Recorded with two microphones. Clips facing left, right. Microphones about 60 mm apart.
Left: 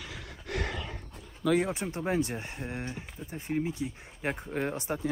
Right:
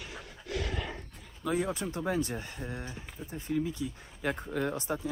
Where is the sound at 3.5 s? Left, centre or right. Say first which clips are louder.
Even; left.